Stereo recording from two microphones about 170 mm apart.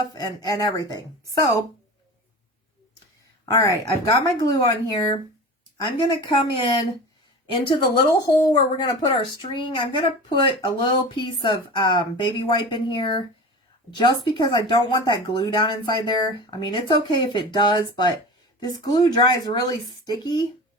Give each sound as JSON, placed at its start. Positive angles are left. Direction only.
{"t": 0.1, "sound": "speech", "side_deg": 20}
{"t": 3.5, "sound": "speech", "side_deg": 20}